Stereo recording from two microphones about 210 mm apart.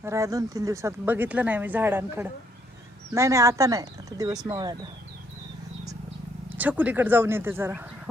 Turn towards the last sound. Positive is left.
turn(degrees=-10)  # may be behind; listen again after turning